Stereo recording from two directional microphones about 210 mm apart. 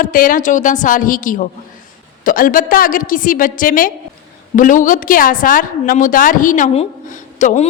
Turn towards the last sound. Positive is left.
turn(degrees=35)  # may be behind; listen again after turning